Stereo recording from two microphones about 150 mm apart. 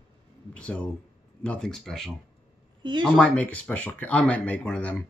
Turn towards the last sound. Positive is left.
turn(degrees=5)  # may be behind; listen again after turning